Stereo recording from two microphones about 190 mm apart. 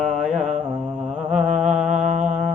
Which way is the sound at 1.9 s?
40° right (ahead or behind).